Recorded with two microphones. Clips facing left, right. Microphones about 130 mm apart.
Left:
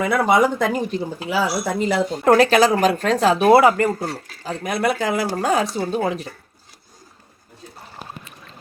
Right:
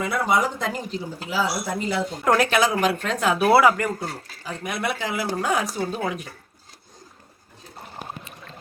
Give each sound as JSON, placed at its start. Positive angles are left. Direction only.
{"t": 0.0, "sound": "speech", "side_deg": 60}
{"t": 2.2, "sound": "speech", "side_deg": 35}
{"t": 3.3, "sound": "speech", "side_deg": 20}
{"t": 5.7, "sound": "speech", "side_deg": 25}